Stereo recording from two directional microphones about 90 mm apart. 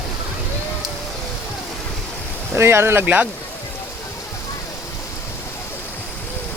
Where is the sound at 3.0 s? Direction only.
15° right (ahead or behind).